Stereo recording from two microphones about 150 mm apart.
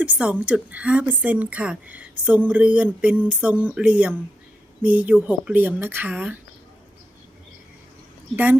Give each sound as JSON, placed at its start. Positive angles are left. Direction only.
{"t": 0.0, "sound": "speech", "side_deg": -10}